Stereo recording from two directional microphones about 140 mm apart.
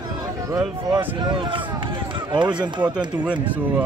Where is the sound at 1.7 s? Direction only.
35° right (ahead or behind).